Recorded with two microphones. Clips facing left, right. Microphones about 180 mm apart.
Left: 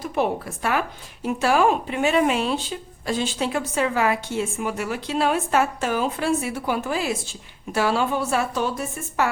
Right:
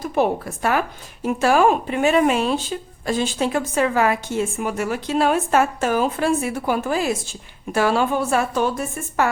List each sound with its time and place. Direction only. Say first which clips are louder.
0.0 s a woman's voice: right 3 dB; 45° right (ahead or behind)